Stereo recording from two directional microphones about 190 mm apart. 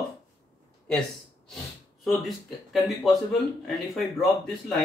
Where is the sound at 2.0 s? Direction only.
Centre (ahead or behind).